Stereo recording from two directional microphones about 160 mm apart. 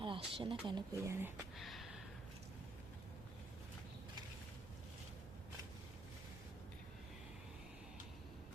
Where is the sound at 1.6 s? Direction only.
Centre (ahead or behind).